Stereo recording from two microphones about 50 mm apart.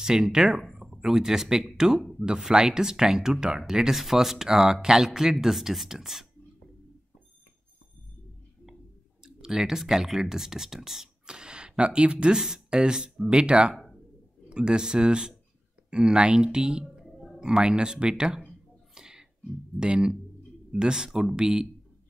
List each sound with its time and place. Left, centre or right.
0.0 s speech: centre
2.1 s speech: centre
9.2 s speech: centre
12.4 s speech: centre
18.9 s a sound: centre
19.8 s speech: centre